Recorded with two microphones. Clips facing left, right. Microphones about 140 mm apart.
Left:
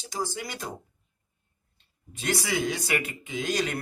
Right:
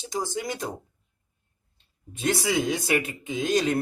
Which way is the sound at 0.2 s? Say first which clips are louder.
Right 3 dB; 20° right (ahead or behind).